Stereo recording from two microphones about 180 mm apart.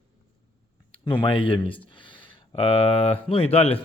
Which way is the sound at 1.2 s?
30° left (ahead or behind).